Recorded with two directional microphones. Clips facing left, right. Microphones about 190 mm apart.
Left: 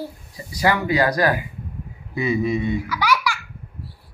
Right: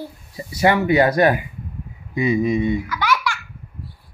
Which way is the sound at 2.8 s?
10° left (ahead or behind).